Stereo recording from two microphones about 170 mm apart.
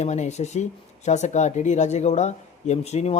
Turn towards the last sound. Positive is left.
turn(degrees=40)  # may be behind; listen again after turning